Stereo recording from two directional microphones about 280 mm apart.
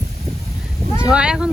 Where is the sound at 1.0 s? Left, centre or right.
Centre.